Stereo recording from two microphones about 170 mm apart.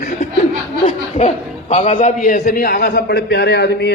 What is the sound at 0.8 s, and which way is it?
A man's voice, 40° left (ahead or behind).